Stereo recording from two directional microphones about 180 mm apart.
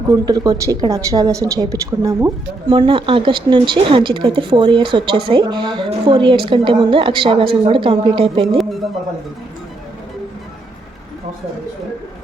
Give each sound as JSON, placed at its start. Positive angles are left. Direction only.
{"t": 0.1, "sound": "a woman's voice", "side_deg": -20}
{"t": 8.5, "sound": "music", "side_deg": 0}